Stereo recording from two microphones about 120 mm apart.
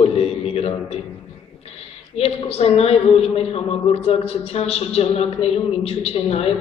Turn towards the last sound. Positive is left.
turn(degrees=55)  # may be behind; listen again after turning